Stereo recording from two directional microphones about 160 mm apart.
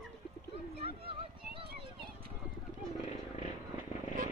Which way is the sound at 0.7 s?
35° right (ahead or behind).